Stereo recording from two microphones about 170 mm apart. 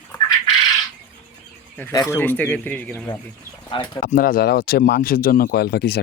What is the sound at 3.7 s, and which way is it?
Speech, 25° left (ahead or behind).